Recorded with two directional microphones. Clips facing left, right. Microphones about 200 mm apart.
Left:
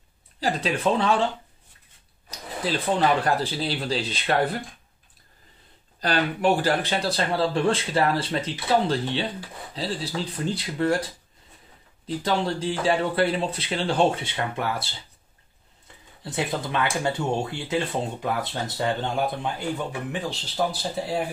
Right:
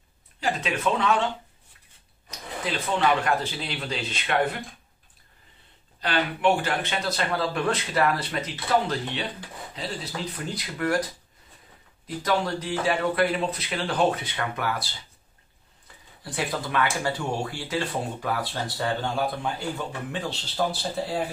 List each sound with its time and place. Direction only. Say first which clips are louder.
0.4 s speech: left 2 dB; 35° left (ahead or behind)
2.6 s speech: left 2 dB; 35° left (ahead or behind)
5.9 s speech: left 2 dB; 40° left (ahead or behind)
12.2 s speech: even; 30° left (ahead or behind)
16.3 s speech: left 2 dB; 25° left (ahead or behind)